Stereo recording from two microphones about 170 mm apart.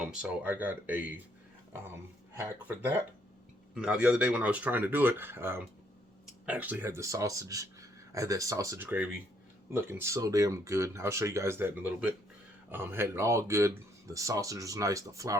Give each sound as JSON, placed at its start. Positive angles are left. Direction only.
{"t": 0.0, "sound": "speech", "side_deg": -5}
{"t": 2.3, "sound": "speech", "side_deg": -15}